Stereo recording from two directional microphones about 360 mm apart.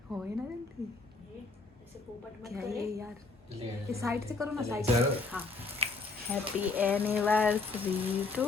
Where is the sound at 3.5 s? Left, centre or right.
Centre.